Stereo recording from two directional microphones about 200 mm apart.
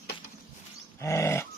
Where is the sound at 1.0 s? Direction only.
15° left (ahead or behind).